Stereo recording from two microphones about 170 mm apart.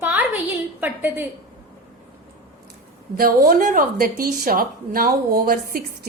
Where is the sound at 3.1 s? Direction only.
60° right (ahead or behind).